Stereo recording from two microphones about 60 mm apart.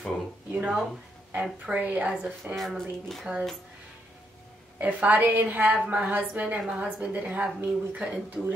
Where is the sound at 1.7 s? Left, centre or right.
Right.